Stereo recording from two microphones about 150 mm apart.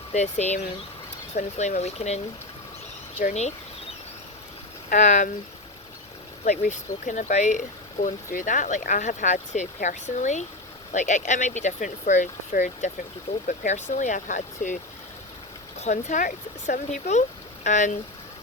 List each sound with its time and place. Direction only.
0.1 s speech: 50° left (ahead or behind)
4.9 s speech: 55° left (ahead or behind)
6.4 s speech: 55° left (ahead or behind)
15.8 s speech: 50° left (ahead or behind)